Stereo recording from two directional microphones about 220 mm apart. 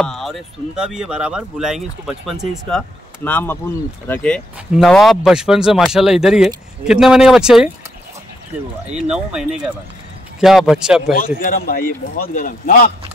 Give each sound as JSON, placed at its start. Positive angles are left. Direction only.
{"t": 0.0, "sound": "speech", "side_deg": 0}
{"t": 9.1, "sound": "speech", "side_deg": -5}
{"t": 11.1, "sound": "a man's voice", "side_deg": 40}